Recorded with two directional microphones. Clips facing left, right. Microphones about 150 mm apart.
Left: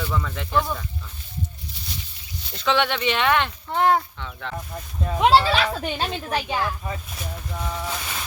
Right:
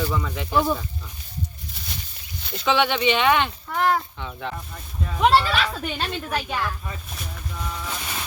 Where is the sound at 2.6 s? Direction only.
Centre (ahead or behind).